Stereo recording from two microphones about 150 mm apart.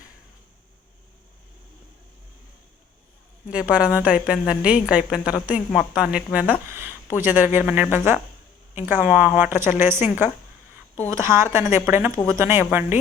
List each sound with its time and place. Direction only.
3.5 s a woman's voice: 10° right (ahead or behind)